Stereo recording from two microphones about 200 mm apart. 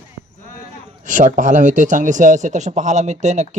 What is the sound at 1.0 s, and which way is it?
A man's voice, 40° right (ahead or behind).